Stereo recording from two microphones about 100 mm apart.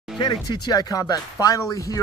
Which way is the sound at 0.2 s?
45° left (ahead or behind).